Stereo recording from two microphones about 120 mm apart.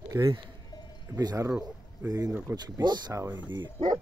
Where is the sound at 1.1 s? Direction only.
30° right (ahead or behind).